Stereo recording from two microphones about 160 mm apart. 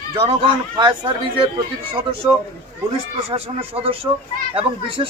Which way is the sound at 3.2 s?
40° right (ahead or behind).